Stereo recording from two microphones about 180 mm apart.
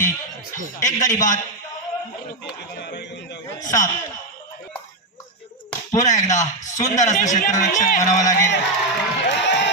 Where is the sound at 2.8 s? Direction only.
75° left (ahead or behind).